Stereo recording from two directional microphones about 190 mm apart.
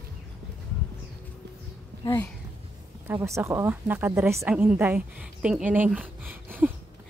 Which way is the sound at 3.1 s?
15° right (ahead or behind).